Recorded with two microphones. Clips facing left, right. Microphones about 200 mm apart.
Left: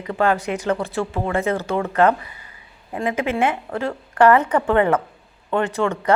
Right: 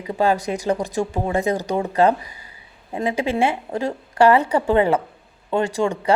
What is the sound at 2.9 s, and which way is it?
Speech, 25° right (ahead or behind).